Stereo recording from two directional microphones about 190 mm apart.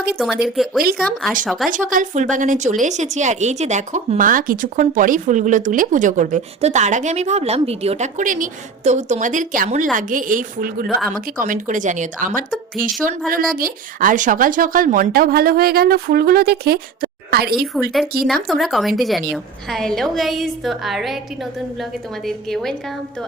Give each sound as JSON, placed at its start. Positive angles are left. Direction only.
{"t": 0.4, "sound": "a woman's voice", "side_deg": 0}
{"t": 1.7, "sound": "a woman's voice", "side_deg": -45}
{"t": 18.4, "sound": "a woman's voice", "side_deg": 0}
{"t": 22.3, "sound": "a woman's voice", "side_deg": 0}